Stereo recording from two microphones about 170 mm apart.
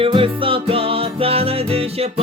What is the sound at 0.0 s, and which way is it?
Music, 30° right (ahead or behind).